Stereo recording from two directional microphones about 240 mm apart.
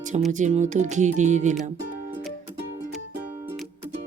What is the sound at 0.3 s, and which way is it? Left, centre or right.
Speech, right.